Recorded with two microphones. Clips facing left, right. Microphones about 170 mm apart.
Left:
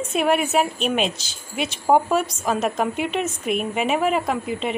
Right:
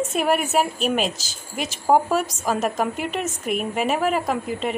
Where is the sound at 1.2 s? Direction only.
45° right (ahead or behind).